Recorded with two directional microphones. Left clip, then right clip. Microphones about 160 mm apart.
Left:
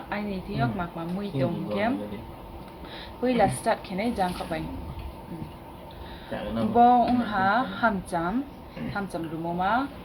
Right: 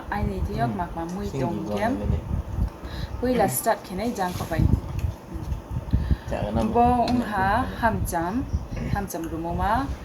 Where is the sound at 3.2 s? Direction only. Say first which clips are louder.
Right 1 dB; 5° left (ahead or behind).